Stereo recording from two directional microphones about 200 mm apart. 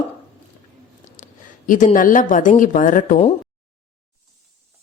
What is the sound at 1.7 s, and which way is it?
Speech, 40° left (ahead or behind).